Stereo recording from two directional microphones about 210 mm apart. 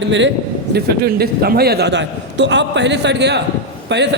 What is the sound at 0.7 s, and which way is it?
A man's voice, 50° right (ahead or behind).